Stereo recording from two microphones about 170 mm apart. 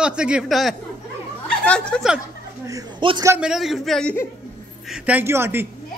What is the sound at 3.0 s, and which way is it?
Speech, 30° right (ahead or behind).